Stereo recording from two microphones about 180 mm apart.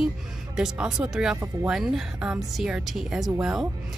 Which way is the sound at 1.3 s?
15° right (ahead or behind).